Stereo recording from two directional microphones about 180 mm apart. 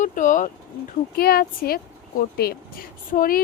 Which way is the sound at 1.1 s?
55° left (ahead or behind).